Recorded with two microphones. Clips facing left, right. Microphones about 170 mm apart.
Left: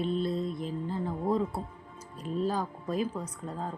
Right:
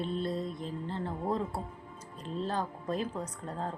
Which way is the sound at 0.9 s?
10° left (ahead or behind).